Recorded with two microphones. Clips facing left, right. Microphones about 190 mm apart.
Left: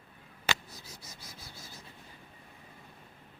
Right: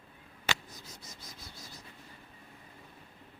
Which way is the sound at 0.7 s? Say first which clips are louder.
Even; 10° left (ahead or behind).